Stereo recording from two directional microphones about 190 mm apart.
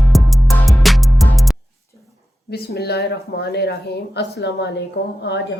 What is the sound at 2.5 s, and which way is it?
A woman's voice, 55° left (ahead or behind).